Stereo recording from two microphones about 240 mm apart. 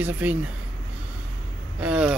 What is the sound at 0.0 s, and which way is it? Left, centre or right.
Speech, centre.